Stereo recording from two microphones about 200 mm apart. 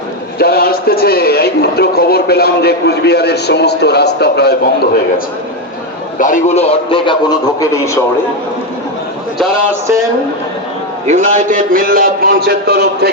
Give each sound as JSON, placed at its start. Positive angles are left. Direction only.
{"t": 0.3, "sound": "a man's voice", "side_deg": 50}
{"t": 6.1, "sound": "a man's voice", "side_deg": 40}
{"t": 11.0, "sound": "a man's voice", "side_deg": -35}